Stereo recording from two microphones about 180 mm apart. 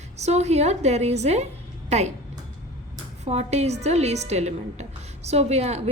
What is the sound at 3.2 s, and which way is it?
A woman's voice, 35° right (ahead or behind).